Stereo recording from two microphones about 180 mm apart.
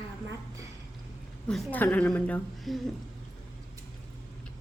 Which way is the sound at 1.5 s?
10° left (ahead or behind).